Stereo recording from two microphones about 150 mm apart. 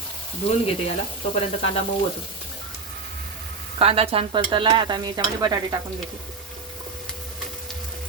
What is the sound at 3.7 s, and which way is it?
Stir, 40° right (ahead or behind).